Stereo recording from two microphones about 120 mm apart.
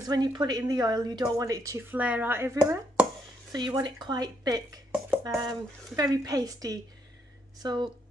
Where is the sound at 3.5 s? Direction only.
35° right (ahead or behind).